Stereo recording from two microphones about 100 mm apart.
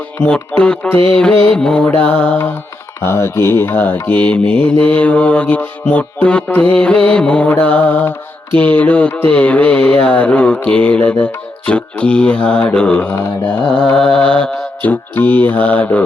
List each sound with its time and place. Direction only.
0.3 s mantra: 10° left (ahead or behind)
3.0 s mantra: 25° left (ahead or behind)